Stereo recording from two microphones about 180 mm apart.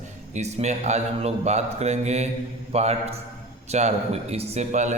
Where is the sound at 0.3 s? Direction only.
40° right (ahead or behind).